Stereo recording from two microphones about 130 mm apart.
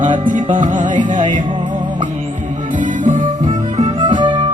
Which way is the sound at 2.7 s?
80° right.